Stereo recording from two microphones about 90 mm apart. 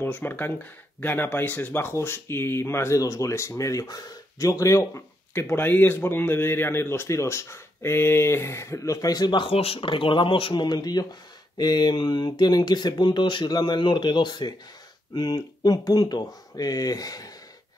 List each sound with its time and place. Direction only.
0.0 s speech: 20° left (ahead or behind); by 17.3 s 45° left (ahead or behind)